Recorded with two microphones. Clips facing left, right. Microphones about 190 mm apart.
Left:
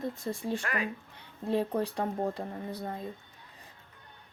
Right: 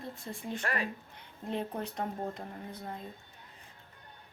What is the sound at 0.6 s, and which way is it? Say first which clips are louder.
Speech: left 1 dB; 35° right (ahead or behind).